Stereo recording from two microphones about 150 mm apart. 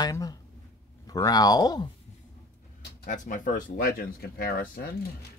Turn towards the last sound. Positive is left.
turn(degrees=85)